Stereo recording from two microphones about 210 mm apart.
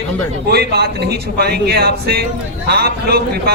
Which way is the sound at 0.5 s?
50° right (ahead or behind).